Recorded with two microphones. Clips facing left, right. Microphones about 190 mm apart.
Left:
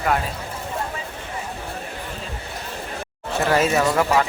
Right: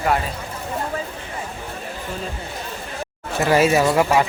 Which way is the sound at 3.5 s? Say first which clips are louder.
Right 3 dB; 10° right (ahead or behind).